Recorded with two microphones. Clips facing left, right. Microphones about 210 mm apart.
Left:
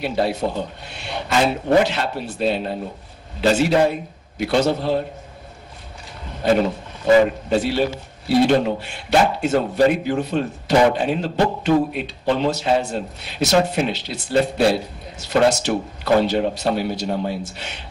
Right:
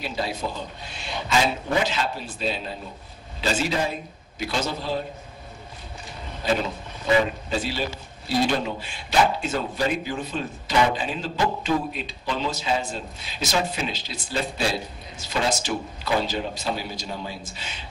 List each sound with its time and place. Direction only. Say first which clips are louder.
0.0 s speech: left 8 dB; 60° left (ahead or behind)
6.4 s speech: left 7 dB; 65° left (ahead or behind)
7.1 s speech: left 7 dB; 45° left (ahead or behind)
7.4 s a man's voice: left 8 dB; 60° left (ahead or behind)